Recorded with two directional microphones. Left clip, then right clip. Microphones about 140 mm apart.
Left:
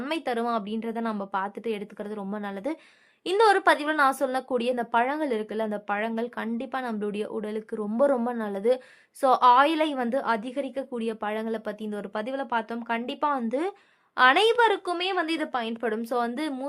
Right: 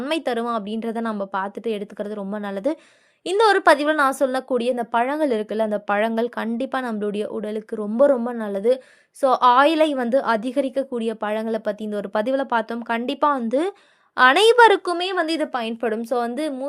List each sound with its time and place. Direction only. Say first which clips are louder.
0.1 s a woman's voice: right 4 dB; 30° right (ahead or behind)
6.0 s a woman's voice: right 8 dB; 45° right (ahead or behind)
14.9 s a woman's voice: right 5 dB; 35° right (ahead or behind); by 16.6 s 20° right (ahead or behind)